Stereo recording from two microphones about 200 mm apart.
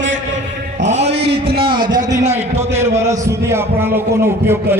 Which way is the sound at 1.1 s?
55° right (ahead or behind).